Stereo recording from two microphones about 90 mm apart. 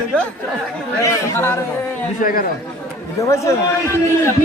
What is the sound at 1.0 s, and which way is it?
Speech, 30° left (ahead or behind).